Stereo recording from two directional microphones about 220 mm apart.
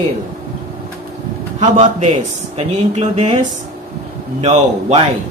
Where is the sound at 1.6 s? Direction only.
35° right (ahead or behind).